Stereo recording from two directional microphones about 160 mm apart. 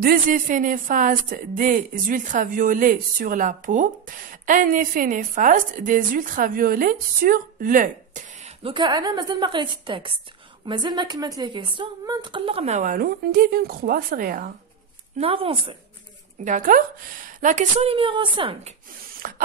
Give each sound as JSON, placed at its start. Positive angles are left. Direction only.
{"t": 0.0, "sound": "speech", "side_deg": -65}
{"t": 8.6, "sound": "a woman's voice", "side_deg": -30}
{"t": 15.1, "sound": "a woman's voice", "side_deg": -35}
{"t": 16.4, "sound": "a woman's voice", "side_deg": -55}
{"t": 19.2, "sound": "a sound", "side_deg": -60}